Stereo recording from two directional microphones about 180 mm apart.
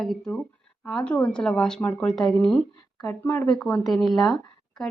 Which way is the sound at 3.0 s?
15° left (ahead or behind).